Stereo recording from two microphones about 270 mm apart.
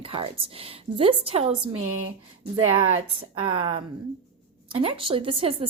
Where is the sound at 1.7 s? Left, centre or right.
Right.